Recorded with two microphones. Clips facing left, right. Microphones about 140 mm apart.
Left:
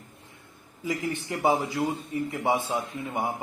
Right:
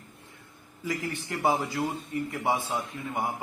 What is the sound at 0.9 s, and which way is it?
A man's voice, 20° left (ahead or behind).